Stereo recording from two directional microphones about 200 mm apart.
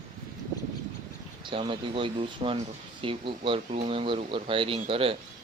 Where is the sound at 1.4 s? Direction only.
25° right (ahead or behind).